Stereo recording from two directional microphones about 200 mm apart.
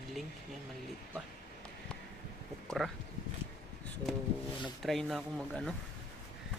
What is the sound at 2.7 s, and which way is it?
Speech, centre (ahead or behind).